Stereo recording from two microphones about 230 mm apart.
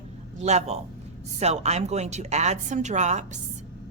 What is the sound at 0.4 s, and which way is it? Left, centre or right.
A woman's voice, right.